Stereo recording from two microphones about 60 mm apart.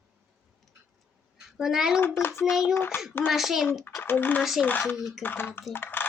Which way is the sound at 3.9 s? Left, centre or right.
Left.